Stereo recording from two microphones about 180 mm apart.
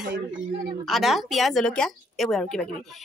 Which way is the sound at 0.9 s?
Centre (ahead or behind).